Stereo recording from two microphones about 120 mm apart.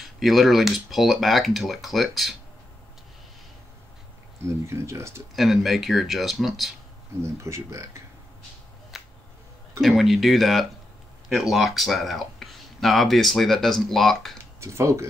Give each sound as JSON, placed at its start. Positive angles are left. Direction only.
{"t": 0.0, "sound": "speech", "side_deg": 0}
{"t": 4.5, "sound": "speech", "side_deg": -25}
{"t": 5.3, "sound": "speech", "side_deg": 0}
{"t": 7.2, "sound": "speech", "side_deg": -25}
{"t": 8.9, "sound": "finger snapping", "side_deg": 0}
{"t": 9.8, "sound": "speech", "side_deg": 0}
{"t": 14.4, "sound": "a sound", "side_deg": -25}